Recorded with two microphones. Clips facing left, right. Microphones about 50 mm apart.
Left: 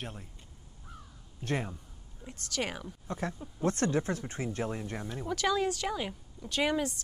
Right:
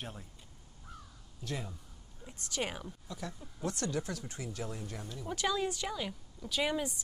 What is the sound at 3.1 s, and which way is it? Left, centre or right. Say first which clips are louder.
Speech: left 10 dB; left.